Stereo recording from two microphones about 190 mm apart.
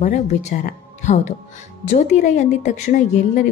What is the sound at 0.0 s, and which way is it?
A woman's voice, 40° left (ahead or behind).